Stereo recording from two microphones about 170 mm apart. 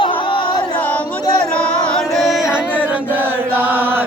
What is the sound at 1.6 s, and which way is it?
Music, 5° left (ahead or behind).